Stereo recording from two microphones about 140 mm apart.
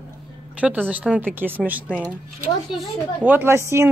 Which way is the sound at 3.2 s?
15° right (ahead or behind).